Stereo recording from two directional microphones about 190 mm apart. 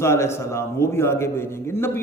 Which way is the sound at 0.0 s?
15° left (ahead or behind).